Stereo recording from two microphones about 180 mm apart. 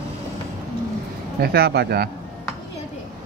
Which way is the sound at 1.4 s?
60° right (ahead or behind).